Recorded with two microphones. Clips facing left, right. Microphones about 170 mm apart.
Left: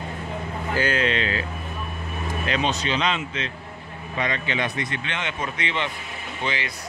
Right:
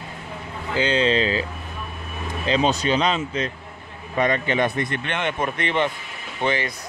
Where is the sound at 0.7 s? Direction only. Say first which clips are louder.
Right 4 dB; 25° right (ahead or behind).